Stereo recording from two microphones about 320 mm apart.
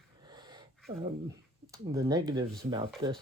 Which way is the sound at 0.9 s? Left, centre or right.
Centre.